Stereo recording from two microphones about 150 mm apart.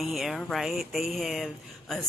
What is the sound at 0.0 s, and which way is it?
A woman's voice, centre (ahead or behind).